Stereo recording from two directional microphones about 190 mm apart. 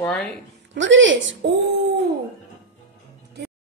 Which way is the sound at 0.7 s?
75° right (ahead or behind).